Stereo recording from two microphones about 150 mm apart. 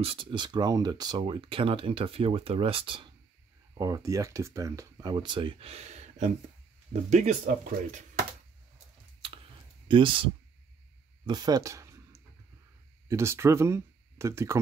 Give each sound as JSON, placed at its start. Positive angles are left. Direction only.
{"t": 0.0, "sound": "speech", "side_deg": -35}
{"t": 3.7, "sound": "speech", "side_deg": -25}
{"t": 9.8, "sound": "speech", "side_deg": -35}
{"t": 11.2, "sound": "a sound", "side_deg": -25}
{"t": 13.1, "sound": "speech", "side_deg": -20}